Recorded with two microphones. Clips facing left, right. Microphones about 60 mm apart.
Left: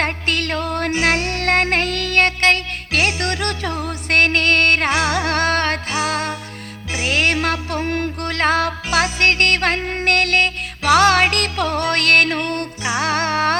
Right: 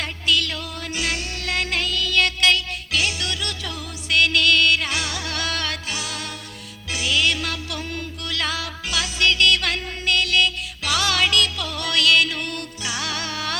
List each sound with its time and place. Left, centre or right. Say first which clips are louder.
0.0 s music: left 3 dB; left
12.8 s music: left 9 dB; left